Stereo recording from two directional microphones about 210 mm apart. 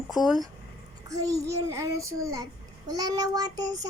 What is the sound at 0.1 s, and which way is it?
Speech, centre (ahead or behind).